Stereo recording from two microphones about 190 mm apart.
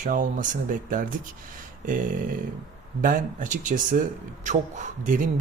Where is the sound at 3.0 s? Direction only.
45° right (ahead or behind).